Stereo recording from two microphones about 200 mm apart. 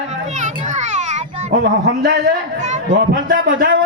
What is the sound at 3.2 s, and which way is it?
Speech, 45° right (ahead or behind).